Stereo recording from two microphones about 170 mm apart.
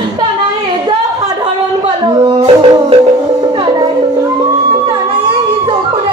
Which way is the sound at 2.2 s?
35° right (ahead or behind).